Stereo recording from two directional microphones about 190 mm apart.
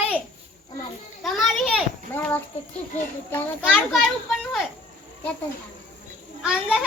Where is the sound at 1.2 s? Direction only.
Centre (ahead or behind).